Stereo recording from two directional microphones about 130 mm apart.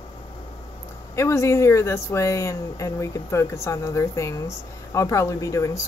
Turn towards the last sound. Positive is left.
turn(degrees=25)  # may be behind; listen again after turning